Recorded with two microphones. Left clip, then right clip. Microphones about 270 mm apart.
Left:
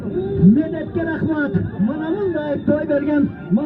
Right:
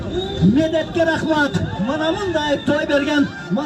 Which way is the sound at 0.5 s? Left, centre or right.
Right.